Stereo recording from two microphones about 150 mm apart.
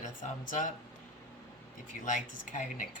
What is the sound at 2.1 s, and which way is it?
Speech, 60° left (ahead or behind).